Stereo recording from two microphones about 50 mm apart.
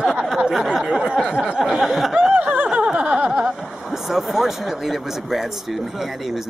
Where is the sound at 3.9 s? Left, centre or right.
Centre.